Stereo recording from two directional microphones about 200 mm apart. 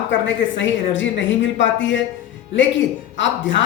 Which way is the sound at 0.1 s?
65° left (ahead or behind).